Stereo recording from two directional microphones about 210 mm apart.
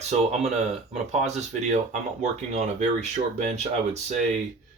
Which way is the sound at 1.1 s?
30° right (ahead or behind).